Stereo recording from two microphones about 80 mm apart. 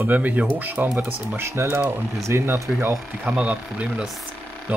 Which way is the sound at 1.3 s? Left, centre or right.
Right.